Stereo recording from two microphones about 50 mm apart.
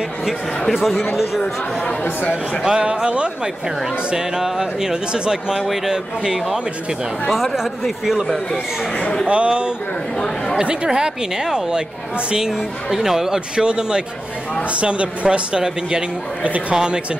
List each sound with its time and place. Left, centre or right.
0.7 s speech: centre
2.6 s speech: centre
7.5 s speech: centre
9.2 s speech: right
16.7 s speech: centre